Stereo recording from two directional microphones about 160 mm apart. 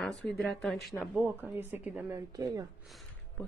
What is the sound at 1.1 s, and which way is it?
Speech, 15° right (ahead or behind).